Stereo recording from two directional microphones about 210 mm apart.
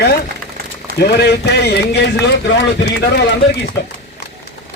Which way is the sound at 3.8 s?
55° left (ahead or behind).